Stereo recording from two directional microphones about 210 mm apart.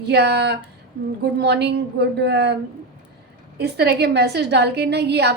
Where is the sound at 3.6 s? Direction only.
55° right (ahead or behind).